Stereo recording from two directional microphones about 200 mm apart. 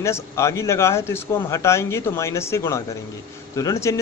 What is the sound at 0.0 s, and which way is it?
Speech, 15° left (ahead or behind).